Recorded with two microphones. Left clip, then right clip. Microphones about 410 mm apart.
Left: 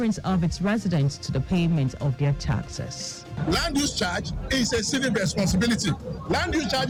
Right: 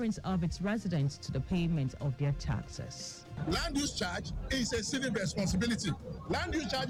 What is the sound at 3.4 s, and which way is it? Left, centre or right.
A man's voice, right.